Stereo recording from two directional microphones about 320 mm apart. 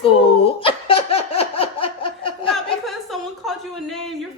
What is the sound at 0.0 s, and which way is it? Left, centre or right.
Giggle, centre.